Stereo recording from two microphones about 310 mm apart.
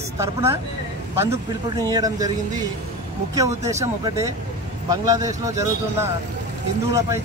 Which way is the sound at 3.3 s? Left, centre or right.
Centre.